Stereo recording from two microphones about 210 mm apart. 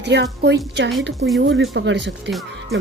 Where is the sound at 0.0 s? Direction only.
55° right (ahead or behind).